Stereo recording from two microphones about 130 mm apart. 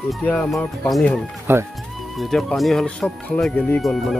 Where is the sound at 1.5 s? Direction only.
15° right (ahead or behind).